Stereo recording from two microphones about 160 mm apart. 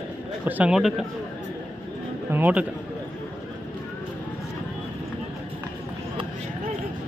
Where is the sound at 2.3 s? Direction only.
10° right (ahead or behind).